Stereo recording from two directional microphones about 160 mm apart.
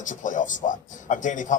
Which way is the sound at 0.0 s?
55° left (ahead or behind).